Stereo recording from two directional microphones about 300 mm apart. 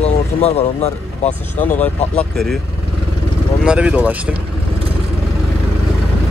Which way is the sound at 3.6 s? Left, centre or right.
Centre.